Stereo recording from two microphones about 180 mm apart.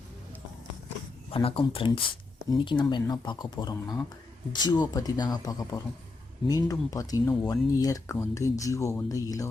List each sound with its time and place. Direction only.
1.3 s speech: 30° left (ahead or behind)